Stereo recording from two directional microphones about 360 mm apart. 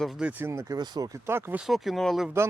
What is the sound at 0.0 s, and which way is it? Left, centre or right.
Speech, centre.